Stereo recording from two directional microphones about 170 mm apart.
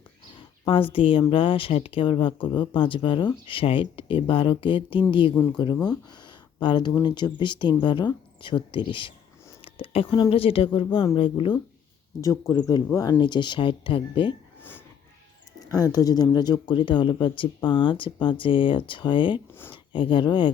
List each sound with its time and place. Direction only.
0.6 s speech: 30° left (ahead or behind)
5.4 s speech: 10° left (ahead or behind)
6.2 s speech: 30° left (ahead or behind)
12.2 s speech: 20° left (ahead or behind)
15.7 s speech: 20° left (ahead or behind)